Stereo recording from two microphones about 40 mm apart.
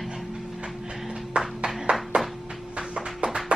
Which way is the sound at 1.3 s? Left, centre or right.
Right.